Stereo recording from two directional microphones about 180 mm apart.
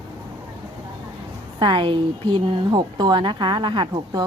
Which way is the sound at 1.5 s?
25° right (ahead or behind).